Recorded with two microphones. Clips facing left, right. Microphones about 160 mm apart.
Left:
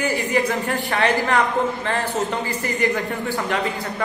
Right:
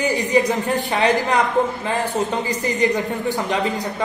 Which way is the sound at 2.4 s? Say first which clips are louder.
Right 3 dB; 15° right (ahead or behind).